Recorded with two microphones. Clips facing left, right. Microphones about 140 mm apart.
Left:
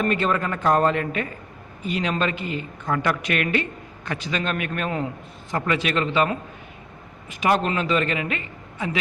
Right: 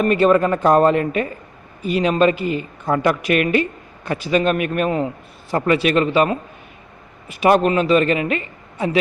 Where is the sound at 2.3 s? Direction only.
25° left (ahead or behind).